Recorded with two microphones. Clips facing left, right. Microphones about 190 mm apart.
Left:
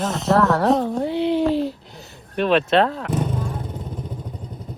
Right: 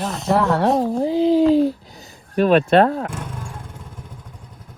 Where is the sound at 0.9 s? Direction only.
35° right (ahead or behind).